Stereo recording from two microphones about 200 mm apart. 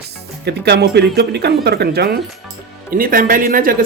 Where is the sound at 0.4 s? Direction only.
55° right (ahead or behind).